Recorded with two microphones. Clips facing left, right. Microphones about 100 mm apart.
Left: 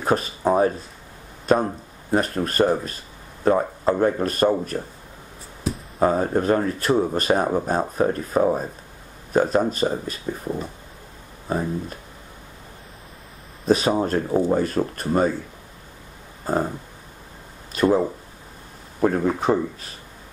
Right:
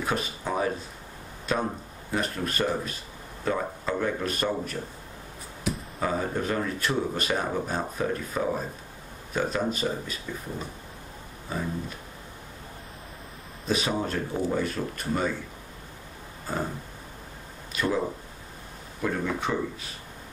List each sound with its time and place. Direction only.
0.0 s speech: 40° left (ahead or behind)
5.9 s speech: 40° left (ahead or behind)
11.4 s speech: 45° left (ahead or behind)
13.7 s speech: 40° left (ahead or behind)
16.5 s speech: 45° left (ahead or behind)
17.7 s speech: 40° left (ahead or behind)